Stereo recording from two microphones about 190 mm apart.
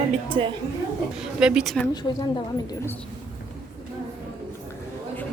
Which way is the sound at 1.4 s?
5° right (ahead or behind).